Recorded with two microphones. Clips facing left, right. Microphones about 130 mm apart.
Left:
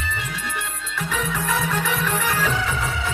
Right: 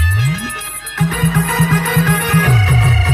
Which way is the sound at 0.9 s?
70° right (ahead or behind).